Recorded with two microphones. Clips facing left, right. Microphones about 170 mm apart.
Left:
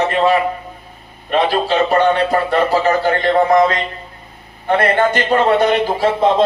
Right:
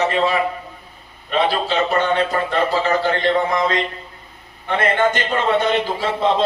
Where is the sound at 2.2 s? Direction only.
40° left (ahead or behind).